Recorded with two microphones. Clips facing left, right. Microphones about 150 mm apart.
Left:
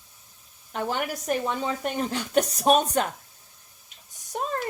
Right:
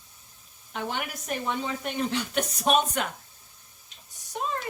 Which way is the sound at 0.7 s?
40° left (ahead or behind).